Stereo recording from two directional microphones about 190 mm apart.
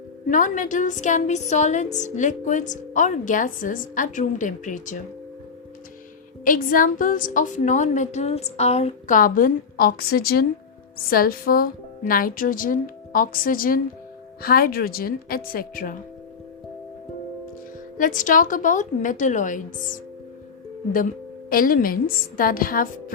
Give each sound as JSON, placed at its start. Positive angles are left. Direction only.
{"t": 0.3, "sound": "a woman's voice", "side_deg": 40}
{"t": 6.4, "sound": "a woman's voice", "side_deg": 45}
{"t": 17.9, "sound": "a woman's voice", "side_deg": 45}
{"t": 21.5, "sound": "a woman's voice", "side_deg": 50}